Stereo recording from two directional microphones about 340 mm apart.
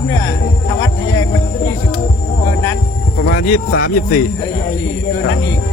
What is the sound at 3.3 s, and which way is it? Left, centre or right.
Speech, left.